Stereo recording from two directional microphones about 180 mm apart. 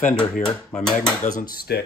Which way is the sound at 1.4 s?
55° left (ahead or behind).